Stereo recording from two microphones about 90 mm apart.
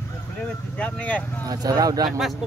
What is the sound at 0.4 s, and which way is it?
Speech, 15° left (ahead or behind).